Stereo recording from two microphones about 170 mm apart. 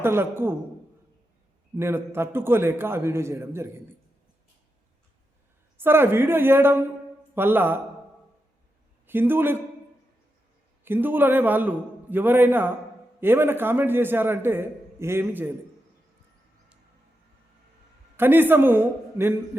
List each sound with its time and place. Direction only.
0.0 s a man's voice: 15° right (ahead or behind)
1.7 s a man's voice: 15° right (ahead or behind)
5.8 s a man's voice: 15° right (ahead or behind)
9.0 s a man's voice: 10° right (ahead or behind)
10.8 s a man's voice: 10° right (ahead or behind)
18.2 s a man's voice: 10° right (ahead or behind)